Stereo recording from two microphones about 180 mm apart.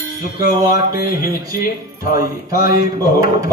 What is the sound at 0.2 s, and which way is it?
A man's voice, 55° left (ahead or behind).